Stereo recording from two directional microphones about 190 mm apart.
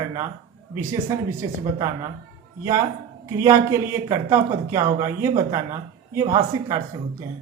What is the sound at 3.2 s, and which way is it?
Speech, 15° right (ahead or behind).